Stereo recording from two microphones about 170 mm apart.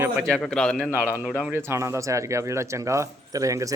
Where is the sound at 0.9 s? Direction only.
10° right (ahead or behind).